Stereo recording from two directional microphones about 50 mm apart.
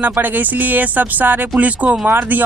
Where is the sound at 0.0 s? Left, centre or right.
Right.